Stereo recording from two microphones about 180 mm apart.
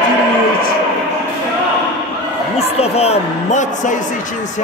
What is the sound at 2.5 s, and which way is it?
A man's voice, 35° left (ahead or behind).